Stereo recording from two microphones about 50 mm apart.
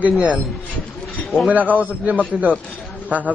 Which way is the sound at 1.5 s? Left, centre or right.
Right.